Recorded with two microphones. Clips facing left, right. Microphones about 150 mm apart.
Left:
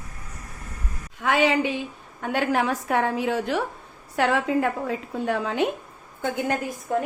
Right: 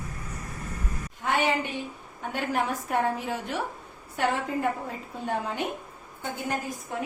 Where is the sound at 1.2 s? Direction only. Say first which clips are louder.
Left 5 dB; 90° left.